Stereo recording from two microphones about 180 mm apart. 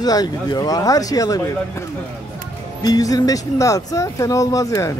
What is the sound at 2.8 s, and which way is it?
Speech, 20° left (ahead or behind).